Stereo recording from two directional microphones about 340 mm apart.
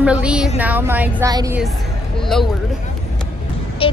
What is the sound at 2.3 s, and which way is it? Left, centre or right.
Speech, centre.